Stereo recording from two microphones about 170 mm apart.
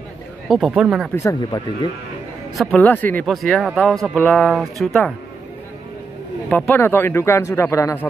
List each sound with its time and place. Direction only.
0.5 s speech: centre (ahead or behind)
1.1 s speech: 20° left (ahead or behind)
2.5 s speech: 5° left (ahead or behind)
6.5 s speech: 10° left (ahead or behind)